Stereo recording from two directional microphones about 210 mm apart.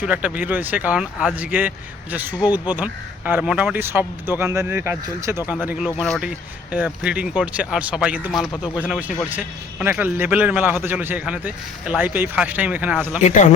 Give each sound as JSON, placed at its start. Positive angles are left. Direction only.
{"t": 0.0, "sound": "speech", "side_deg": -5}
{"t": 13.2, "sound": "speech", "side_deg": 35}